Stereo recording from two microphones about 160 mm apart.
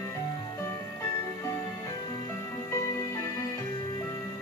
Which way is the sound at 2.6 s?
20° left (ahead or behind).